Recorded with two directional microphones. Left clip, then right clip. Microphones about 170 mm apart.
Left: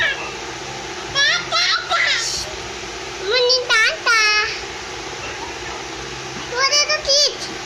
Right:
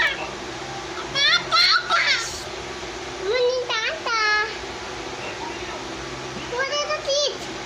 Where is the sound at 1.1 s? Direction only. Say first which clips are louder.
Left 1 dB; 10° right (ahead or behind).